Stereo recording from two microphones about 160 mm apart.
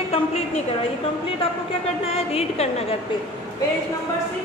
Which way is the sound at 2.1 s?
40° left (ahead or behind).